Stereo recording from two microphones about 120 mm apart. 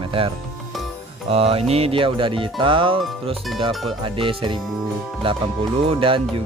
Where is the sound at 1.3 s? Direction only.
55° right (ahead or behind).